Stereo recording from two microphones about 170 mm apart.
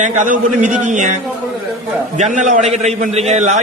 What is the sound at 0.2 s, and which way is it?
Speech, 50° right (ahead or behind).